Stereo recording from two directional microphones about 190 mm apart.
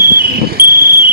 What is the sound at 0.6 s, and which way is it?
Cricket, 50° right (ahead or behind).